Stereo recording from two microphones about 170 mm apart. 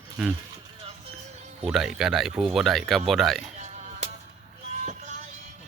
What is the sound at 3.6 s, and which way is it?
Music, 40° right (ahead or behind).